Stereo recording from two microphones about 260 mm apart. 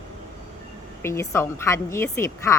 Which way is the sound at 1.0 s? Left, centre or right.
Centre.